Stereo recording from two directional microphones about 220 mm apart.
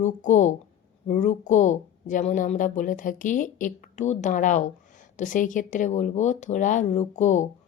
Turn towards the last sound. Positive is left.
turn(degrees=35)  # may be behind; listen again after turning